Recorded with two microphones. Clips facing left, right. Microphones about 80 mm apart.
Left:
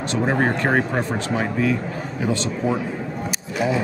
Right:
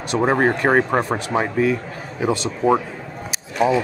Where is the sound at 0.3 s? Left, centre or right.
Right.